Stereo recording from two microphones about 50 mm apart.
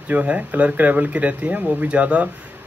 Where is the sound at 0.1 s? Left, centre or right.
Right.